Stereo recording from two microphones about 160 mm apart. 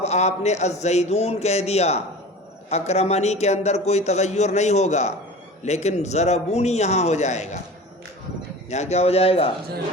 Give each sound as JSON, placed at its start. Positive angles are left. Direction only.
{"t": 0.0, "sound": "a man's voice", "side_deg": 45}
{"t": 8.7, "sound": "a man's voice", "side_deg": 45}